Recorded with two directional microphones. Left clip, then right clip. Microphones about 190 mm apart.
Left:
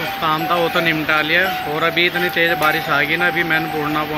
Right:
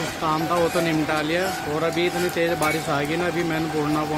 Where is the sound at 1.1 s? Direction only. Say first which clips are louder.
Left 7 dB; 15° right (ahead or behind).